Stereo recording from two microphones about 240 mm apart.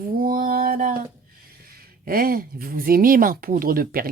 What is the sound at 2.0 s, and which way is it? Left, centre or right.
Speech, right.